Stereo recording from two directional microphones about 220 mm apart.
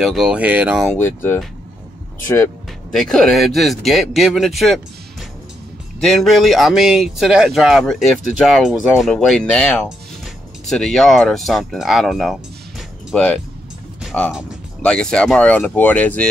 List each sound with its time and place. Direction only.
0.0 s speech: centre (ahead or behind)
0.9 s speech: 10° left (ahead or behind)
5.9 s speech: centre (ahead or behind)